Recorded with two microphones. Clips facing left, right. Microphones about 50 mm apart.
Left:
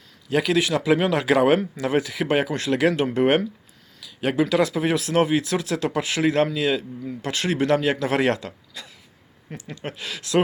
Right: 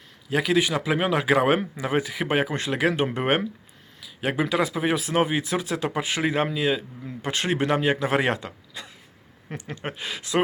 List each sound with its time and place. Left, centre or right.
0.3 s speech: centre
9.6 s speech: right